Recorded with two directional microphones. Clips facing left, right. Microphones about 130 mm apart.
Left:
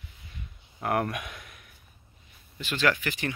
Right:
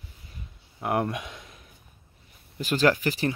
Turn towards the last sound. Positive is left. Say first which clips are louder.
# right 5 dB
turn(degrees=-35)  # may be behind; listen again after turning